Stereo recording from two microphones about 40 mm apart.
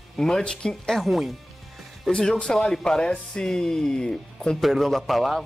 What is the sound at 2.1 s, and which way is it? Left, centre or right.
Speech, left.